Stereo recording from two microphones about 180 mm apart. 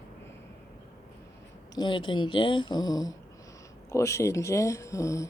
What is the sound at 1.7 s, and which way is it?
Speech, 25° left (ahead or behind).